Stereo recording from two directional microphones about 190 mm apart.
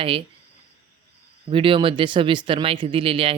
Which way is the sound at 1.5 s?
25° right (ahead or behind).